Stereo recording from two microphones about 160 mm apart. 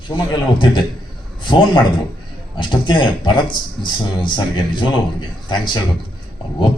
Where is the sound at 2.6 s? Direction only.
30° left (ahead or behind).